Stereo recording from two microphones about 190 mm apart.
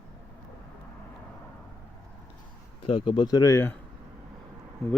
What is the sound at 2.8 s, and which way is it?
Speech, 25° left (ahead or behind).